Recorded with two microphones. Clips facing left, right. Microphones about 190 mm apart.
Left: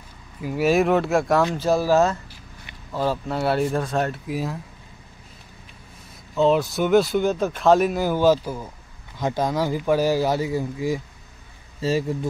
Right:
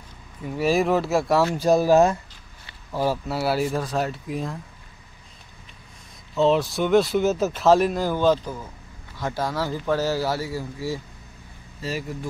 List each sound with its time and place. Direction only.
0.4 s speech: 5° left (ahead or behind)
6.3 s speech: centre (ahead or behind); by 12.3 s 25° left (ahead or behind)